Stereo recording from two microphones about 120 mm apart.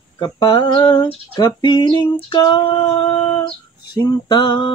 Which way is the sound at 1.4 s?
35° left (ahead or behind).